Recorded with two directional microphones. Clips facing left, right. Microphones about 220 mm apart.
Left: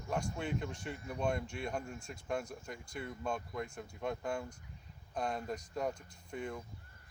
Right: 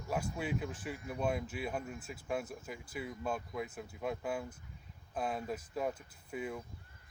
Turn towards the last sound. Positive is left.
turn(degrees=-5)  # may be behind; listen again after turning